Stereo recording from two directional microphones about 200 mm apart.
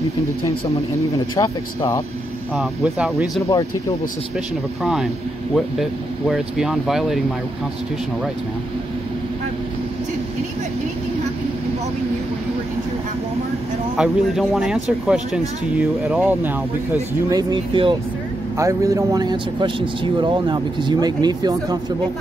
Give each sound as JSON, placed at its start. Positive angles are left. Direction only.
{"t": 1.3, "sound": "speech", "side_deg": 15}
{"t": 2.5, "sound": "speech", "side_deg": -5}
{"t": 5.5, "sound": "speech", "side_deg": 0}
{"t": 13.9, "sound": "speech", "side_deg": -5}
{"t": 17.3, "sound": "a man's voice", "side_deg": -20}